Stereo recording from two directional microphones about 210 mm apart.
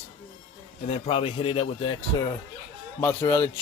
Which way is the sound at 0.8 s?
30° left (ahead or behind).